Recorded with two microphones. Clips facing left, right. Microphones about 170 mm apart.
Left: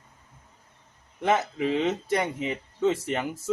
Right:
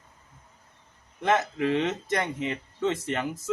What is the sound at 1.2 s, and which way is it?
Speech, 10° left (ahead or behind).